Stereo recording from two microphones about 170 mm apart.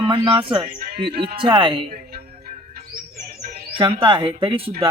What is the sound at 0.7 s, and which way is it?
Music, 60° right (ahead or behind).